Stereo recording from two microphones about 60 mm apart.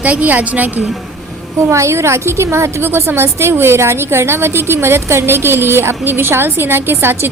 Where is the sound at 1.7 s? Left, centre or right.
Right.